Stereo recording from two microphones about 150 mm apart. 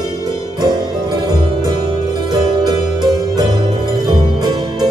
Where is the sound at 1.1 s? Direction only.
25° right (ahead or behind).